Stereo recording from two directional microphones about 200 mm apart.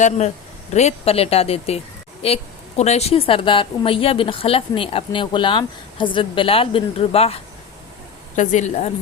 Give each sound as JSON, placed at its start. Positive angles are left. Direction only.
{"t": 0.7, "sound": "a woman's voice", "side_deg": 35}
{"t": 8.4, "sound": "speech", "side_deg": 35}